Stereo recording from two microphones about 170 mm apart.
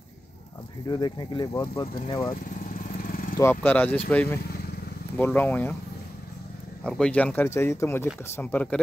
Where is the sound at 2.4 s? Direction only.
55° left (ahead or behind).